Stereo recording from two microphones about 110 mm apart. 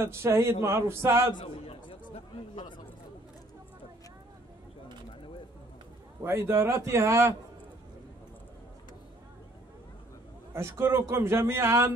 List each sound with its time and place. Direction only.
0.0 s a man's voice: 25° right (ahead or behind)
1.4 s chatter: 60° left (ahead or behind)
6.2 s a man's voice: 25° right (ahead or behind)
10.5 s a man's voice: 25° right (ahead or behind)